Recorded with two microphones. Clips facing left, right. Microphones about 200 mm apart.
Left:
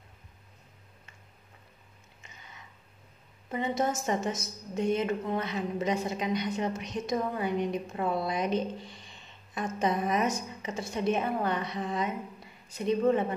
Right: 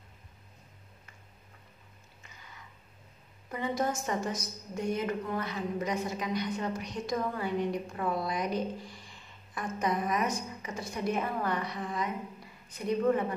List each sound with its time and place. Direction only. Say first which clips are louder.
3.4 s a woman's voice: left 2 dB; 20° left (ahead or behind)